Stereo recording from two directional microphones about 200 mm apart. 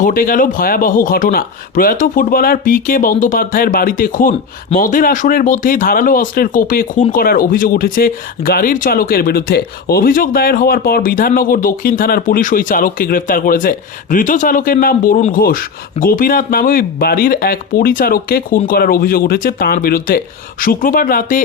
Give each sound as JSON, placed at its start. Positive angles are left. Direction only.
{"t": 0.0, "sound": "speech", "side_deg": 45}